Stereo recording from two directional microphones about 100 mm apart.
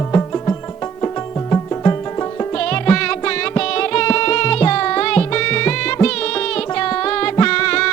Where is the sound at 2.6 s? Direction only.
10° left (ahead or behind).